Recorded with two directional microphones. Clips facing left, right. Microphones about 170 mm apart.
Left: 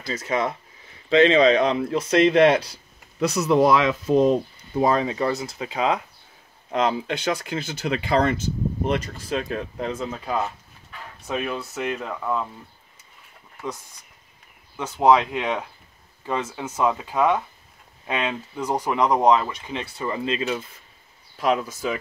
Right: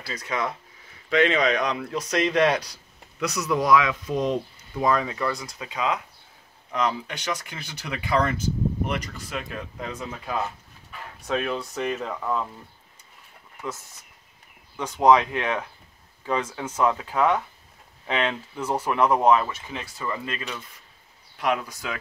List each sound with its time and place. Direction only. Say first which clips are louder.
0.0 s speech: left 4 dB; 25° left (ahead or behind)
11.2 s speech: right 1 dB; 5° left (ahead or behind)
14.8 s speech: left 1 dB; 5° left (ahead or behind); by 20.4 s 25° left (ahead or behind)